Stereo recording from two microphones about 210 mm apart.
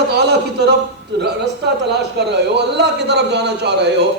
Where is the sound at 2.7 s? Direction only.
55° right (ahead or behind).